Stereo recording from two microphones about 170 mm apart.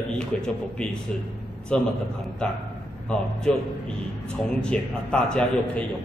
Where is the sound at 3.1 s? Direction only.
5° left (ahead or behind).